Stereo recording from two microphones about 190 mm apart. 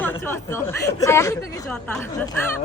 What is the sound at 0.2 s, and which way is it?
A woman's voice, 10° left (ahead or behind).